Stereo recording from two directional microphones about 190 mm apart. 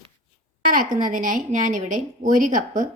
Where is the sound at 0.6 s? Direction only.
45° right (ahead or behind).